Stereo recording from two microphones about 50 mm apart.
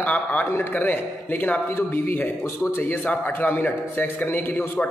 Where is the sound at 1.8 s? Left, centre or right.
Left.